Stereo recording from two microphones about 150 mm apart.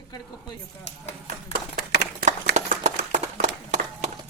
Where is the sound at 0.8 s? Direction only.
45° left (ahead or behind).